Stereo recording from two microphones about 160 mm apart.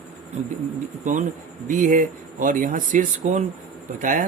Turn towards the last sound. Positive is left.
turn(degrees=-55)  # may be behind; listen again after turning